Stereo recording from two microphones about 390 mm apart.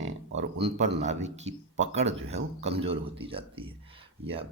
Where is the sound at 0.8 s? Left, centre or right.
Centre.